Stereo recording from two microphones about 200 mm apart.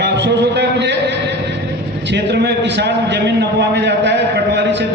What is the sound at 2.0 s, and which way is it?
A man's voice, 60° right (ahead or behind).